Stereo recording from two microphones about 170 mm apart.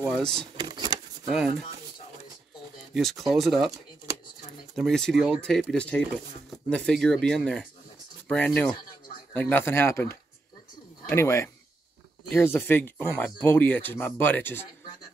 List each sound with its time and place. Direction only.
0.1 s speech: 5° left (ahead or behind)
0.6 s a sound: 25° right (ahead or behind)
2.9 s speech: centre (ahead or behind)
4.7 s speech: centre (ahead or behind)